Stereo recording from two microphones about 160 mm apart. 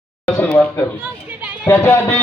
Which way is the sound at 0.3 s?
10° left (ahead or behind).